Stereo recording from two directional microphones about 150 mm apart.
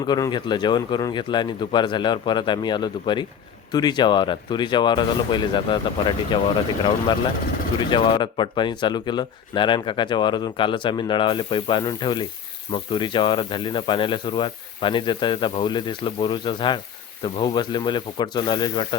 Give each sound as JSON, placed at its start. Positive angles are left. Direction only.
{"t": 0.1, "sound": "speech", "side_deg": 30}
{"t": 7.8, "sound": "speech", "side_deg": 30}